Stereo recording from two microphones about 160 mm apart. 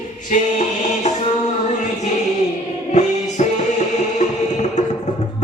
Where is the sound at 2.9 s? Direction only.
45° left (ahead or behind).